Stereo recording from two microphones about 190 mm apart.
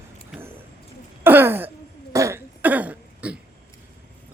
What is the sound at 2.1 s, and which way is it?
Cough, 15° right (ahead or behind).